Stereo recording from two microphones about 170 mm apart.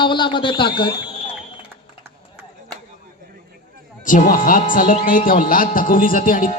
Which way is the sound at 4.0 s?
50° left (ahead or behind).